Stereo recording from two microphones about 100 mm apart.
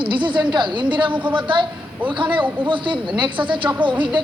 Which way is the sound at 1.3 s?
55° right (ahead or behind).